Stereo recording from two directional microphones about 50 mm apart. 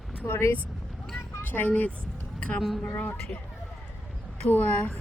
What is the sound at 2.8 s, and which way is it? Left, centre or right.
Speech, left.